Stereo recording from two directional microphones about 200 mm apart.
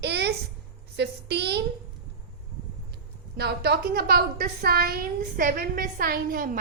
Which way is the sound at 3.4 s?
55° right (ahead or behind).